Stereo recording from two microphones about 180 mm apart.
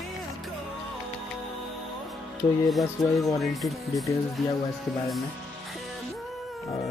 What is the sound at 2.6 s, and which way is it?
Speech, centre (ahead or behind).